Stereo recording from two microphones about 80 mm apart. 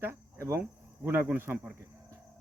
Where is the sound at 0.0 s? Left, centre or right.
Right.